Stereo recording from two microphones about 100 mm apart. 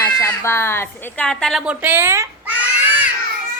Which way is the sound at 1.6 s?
10° right (ahead or behind).